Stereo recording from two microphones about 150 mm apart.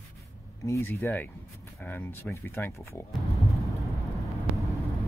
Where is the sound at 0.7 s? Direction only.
20° left (ahead or behind).